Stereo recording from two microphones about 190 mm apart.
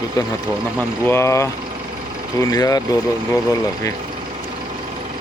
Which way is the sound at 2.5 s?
20° left (ahead or behind).